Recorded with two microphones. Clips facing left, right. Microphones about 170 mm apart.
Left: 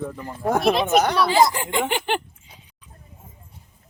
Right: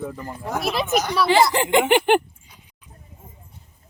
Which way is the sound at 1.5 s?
75° right (ahead or behind).